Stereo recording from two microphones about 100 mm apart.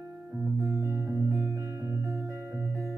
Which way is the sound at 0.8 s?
25° right (ahead or behind).